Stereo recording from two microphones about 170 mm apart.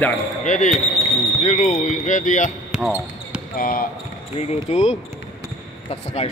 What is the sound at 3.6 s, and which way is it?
Speech, 55° left (ahead or behind).